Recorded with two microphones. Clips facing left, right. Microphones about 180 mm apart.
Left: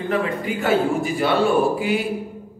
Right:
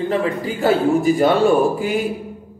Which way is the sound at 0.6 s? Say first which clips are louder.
Right 4 dB; 40° right (ahead or behind).